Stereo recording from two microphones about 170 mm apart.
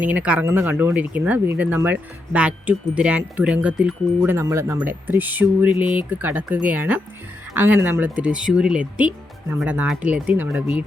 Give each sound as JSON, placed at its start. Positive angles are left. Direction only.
{"t": 0.0, "sound": "speech", "side_deg": -10}